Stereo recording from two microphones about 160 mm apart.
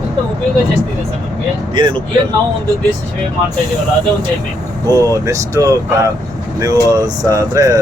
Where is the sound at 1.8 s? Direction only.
30° right (ahead or behind).